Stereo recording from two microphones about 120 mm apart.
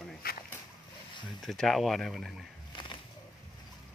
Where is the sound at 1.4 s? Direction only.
5° left (ahead or behind).